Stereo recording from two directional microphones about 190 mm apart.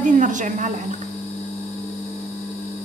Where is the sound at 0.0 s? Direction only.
40° right (ahead or behind).